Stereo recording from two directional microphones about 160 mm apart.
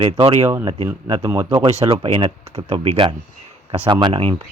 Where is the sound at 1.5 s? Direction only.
40° right (ahead or behind).